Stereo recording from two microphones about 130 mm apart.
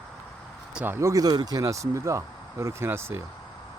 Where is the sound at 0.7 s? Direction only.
15° right (ahead or behind).